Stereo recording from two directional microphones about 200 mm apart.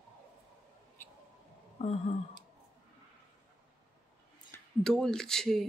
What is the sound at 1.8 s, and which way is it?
Speech, 30° left (ahead or behind).